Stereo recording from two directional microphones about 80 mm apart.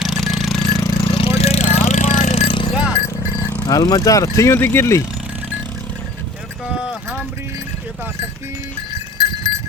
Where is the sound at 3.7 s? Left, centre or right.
Left.